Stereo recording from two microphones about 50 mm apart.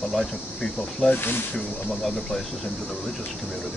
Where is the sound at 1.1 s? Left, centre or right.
Left.